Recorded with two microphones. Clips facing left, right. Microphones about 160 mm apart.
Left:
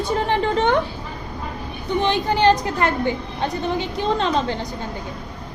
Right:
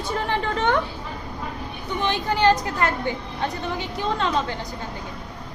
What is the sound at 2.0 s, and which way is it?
A woman's voice, 20° left (ahead or behind).